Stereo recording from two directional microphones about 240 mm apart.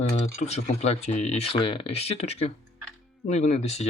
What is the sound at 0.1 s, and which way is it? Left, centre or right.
Speech, left.